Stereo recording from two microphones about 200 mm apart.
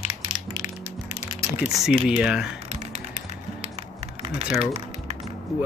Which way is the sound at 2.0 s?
5° right (ahead or behind).